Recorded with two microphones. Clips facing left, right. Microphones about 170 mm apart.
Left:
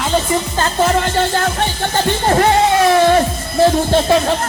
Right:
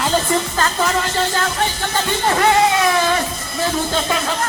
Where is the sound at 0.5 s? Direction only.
30° left (ahead or behind).